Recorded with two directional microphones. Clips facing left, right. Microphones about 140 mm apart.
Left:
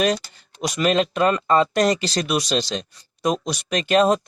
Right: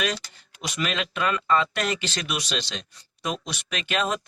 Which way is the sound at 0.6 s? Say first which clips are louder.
Left 9 dB; 40° left (ahead or behind).